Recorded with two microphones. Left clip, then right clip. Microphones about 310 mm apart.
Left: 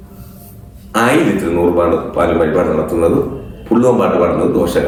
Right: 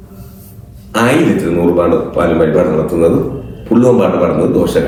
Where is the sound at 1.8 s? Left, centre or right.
Centre.